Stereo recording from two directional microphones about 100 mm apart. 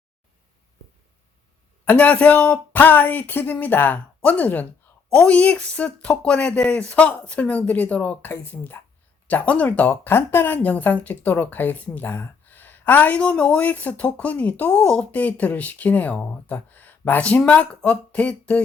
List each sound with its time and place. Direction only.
1.8 s speech: 15° left (ahead or behind)